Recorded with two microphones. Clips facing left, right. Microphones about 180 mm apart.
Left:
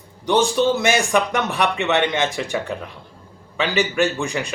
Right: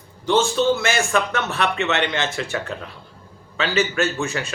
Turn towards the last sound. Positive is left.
turn(degrees=15)  # may be behind; listen again after turning